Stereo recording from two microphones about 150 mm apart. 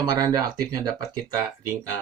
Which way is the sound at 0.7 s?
25° right (ahead or behind).